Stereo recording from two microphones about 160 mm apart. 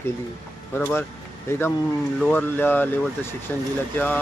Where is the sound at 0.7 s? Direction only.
15° left (ahead or behind).